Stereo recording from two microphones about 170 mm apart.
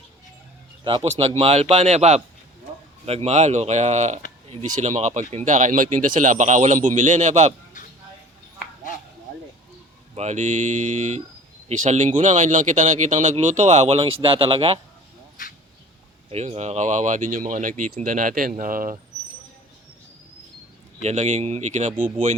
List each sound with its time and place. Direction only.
0.9 s speech: 30° right (ahead or behind)
10.2 s speech: 45° right (ahead or behind)
16.3 s speech: 40° right (ahead or behind)
21.0 s speech: 40° right (ahead or behind)